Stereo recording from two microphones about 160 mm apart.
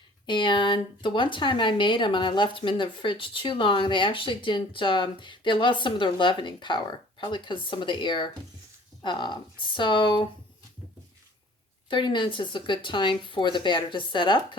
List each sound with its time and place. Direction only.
0.3 s speech: 30° left (ahead or behind)
11.9 s speech: 30° left (ahead or behind)